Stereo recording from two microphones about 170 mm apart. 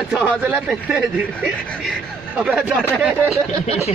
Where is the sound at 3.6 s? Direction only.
35° left (ahead or behind).